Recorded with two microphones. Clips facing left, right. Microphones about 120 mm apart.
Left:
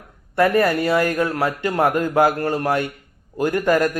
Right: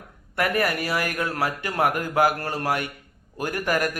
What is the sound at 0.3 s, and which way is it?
A man's voice, 25° left (ahead or behind).